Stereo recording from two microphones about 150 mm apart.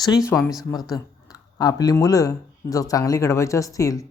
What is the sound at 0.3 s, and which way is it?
Speech, 10° left (ahead or behind).